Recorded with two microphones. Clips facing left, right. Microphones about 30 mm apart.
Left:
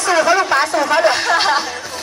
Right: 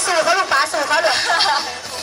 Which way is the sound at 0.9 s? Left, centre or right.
Right.